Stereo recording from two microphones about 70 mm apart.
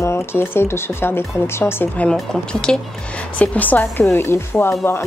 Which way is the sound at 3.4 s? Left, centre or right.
Left.